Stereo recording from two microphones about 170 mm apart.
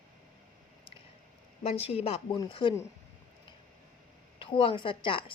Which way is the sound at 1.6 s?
35° left (ahead or behind).